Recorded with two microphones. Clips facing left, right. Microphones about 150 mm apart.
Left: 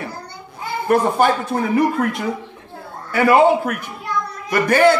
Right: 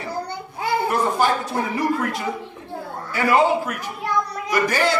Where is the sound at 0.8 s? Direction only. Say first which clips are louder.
Left 7 dB; 55° left (ahead or behind).